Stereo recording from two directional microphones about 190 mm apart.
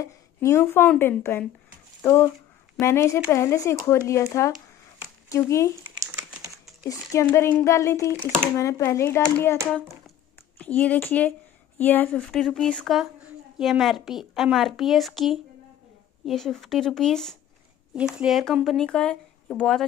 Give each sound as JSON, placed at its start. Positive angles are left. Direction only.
{"t": 0.0, "sound": "speech", "side_deg": 15}
{"t": 2.8, "sound": "speech", "side_deg": 15}
{"t": 5.9, "sound": "typing", "side_deg": -15}
{"t": 6.8, "sound": "speech", "side_deg": 15}
{"t": 8.2, "sound": "speech", "side_deg": 5}
{"t": 8.5, "sound": "speech", "side_deg": 15}